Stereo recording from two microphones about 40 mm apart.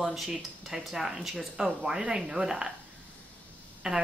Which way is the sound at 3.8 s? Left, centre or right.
Centre.